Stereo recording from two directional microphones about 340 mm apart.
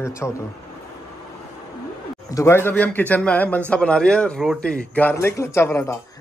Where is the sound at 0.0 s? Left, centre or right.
Centre.